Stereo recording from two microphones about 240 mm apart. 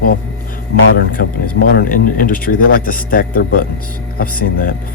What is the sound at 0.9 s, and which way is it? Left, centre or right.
Speech, left.